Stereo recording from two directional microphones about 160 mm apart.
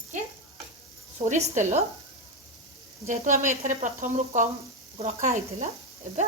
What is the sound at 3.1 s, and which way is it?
Speech, 50° right (ahead or behind).